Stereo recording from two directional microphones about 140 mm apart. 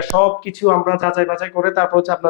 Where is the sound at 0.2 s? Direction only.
20° left (ahead or behind).